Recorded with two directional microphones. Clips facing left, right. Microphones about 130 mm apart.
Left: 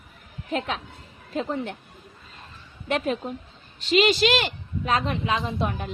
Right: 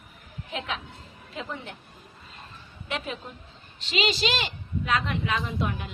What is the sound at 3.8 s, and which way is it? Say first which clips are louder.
Speech: left 7 dB; 50° left (ahead or behind).